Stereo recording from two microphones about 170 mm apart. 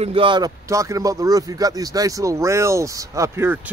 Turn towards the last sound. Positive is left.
turn(degrees=-15)  # may be behind; listen again after turning